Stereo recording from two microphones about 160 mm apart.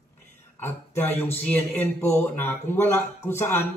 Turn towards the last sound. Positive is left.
turn(degrees=15)  # may be behind; listen again after turning